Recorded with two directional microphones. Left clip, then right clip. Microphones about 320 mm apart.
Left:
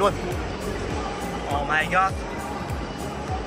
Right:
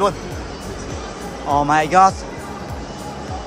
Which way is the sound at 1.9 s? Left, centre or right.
Centre.